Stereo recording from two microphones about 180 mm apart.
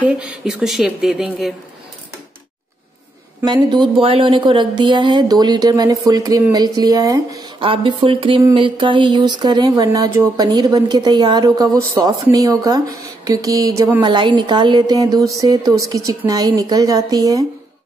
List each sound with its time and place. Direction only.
0.2 s speech: 5° right (ahead or behind)
3.4 s speech: 25° right (ahead or behind)
14.0 s speech: 25° right (ahead or behind)